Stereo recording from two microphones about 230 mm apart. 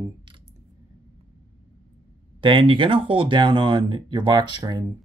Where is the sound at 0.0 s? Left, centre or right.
Right.